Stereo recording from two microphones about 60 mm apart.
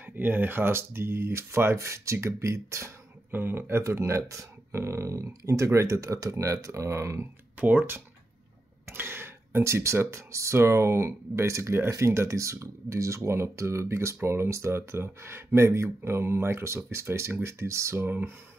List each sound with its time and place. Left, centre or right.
0.0 s speech: right
3.3 s speech: right
3.8 s speech: right
4.2 s speech: right
7.5 s speech: right
18.0 s speech: right